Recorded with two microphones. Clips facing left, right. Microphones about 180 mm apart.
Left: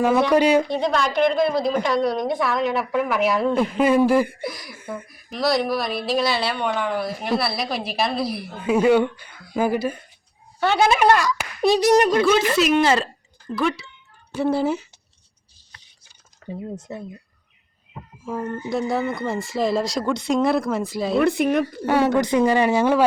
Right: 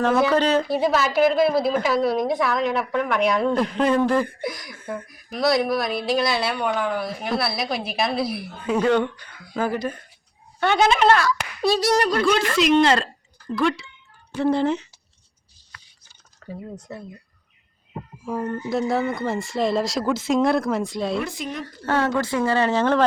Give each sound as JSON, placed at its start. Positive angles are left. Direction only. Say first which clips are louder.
{"t": 0.0, "sound": "a woman's voice", "louder": "left 1 dB", "side_deg": 0}
{"t": 0.3, "sound": "speech", "louder": "left 3 dB", "side_deg": 10}
{"t": 0.7, "sound": "a woman's voice", "louder": "right 1 dB", "side_deg": -5}
{"t": 8.6, "sound": "speech", "louder": "left 3 dB", "side_deg": 10}
{"t": 11.6, "sound": "clapping", "louder": "left 4 dB", "side_deg": 20}
{"t": 12.2, "sound": "a woman's voice", "louder": "left 2 dB", "side_deg": 5}
{"t": 16.4, "sound": "a sound", "louder": "left 3 dB", "side_deg": 15}
{"t": 16.9, "sound": "clapping", "louder": "left 1 dB", "side_deg": 20}
{"t": 18.2, "sound": "a woman's voice", "louder": "right 1 dB", "side_deg": 0}
{"t": 21.2, "sound": "speech", "louder": "left 10 dB", "side_deg": 60}
{"t": 21.6, "sound": "speech", "louder": "left 4 dB", "side_deg": 15}